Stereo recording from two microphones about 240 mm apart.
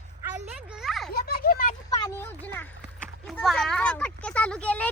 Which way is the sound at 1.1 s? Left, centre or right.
Left.